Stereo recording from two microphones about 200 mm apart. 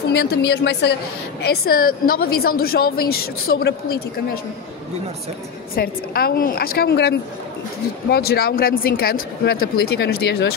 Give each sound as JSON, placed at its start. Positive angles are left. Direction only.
{"t": 0.1, "sound": "a woman's voice", "side_deg": 55}
{"t": 5.8, "sound": "speech", "side_deg": 50}